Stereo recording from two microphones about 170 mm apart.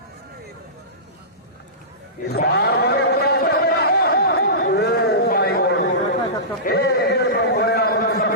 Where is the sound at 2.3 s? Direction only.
70° left (ahead or behind).